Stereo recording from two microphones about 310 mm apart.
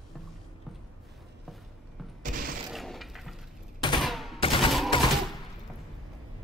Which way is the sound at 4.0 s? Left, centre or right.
Centre.